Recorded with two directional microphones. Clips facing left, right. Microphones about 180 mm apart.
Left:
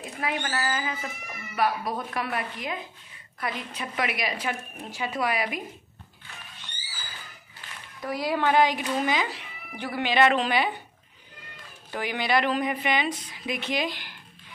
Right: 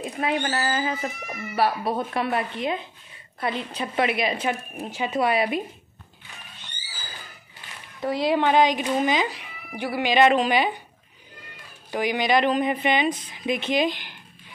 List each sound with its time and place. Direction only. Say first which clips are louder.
0.0 s a child's voice: right 5 dB; 25° right (ahead or behind)
8.0 s a child's voice: right 5 dB; 25° right (ahead or behind)
11.9 s a child's voice: right 4 dB; 15° right (ahead or behind)